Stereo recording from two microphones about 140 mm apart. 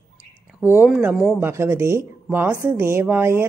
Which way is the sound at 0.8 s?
5° right (ahead or behind).